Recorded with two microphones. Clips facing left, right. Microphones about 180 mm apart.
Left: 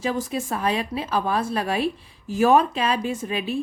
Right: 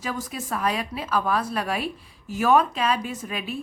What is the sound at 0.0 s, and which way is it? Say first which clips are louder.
Speech: left 6 dB; 30° left (ahead or behind).